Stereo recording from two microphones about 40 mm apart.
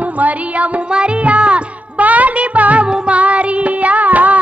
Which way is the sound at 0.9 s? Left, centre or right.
Right.